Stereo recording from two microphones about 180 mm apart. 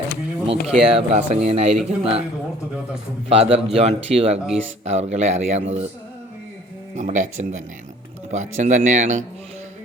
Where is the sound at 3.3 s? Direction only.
30° right (ahead or behind).